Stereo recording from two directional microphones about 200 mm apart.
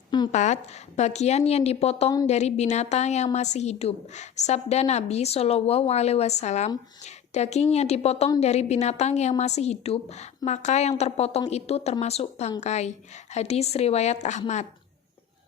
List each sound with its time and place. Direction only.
0.3 s a woman's voice: 35° left (ahead or behind)